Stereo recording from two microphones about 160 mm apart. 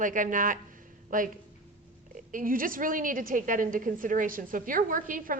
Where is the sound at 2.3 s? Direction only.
60° right (ahead or behind).